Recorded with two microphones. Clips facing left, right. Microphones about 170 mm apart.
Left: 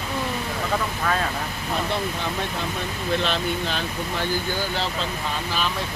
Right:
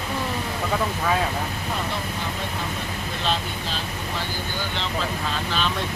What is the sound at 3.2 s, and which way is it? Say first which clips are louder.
Speech: left 2 dB; 65° left (ahead or behind).